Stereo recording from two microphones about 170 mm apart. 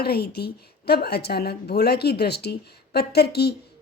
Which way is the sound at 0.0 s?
65° left (ahead or behind).